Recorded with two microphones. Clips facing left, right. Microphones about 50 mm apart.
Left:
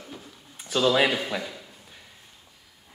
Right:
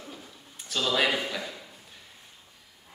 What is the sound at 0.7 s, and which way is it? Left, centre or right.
Speech, centre.